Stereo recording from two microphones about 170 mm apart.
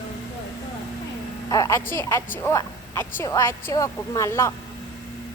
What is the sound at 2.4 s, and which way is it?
A woman's voice, 15° left (ahead or behind).